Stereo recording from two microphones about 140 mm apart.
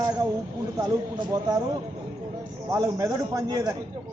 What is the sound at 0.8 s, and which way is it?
Speech, 30° right (ahead or behind).